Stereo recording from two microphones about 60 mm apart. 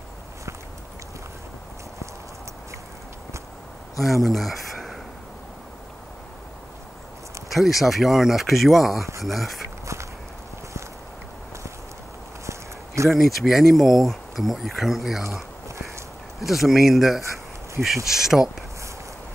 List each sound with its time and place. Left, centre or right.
4.0 s speech: centre
7.5 s speech: centre
12.4 s a sound: right
13.1 s speech: centre
16.3 s speech: centre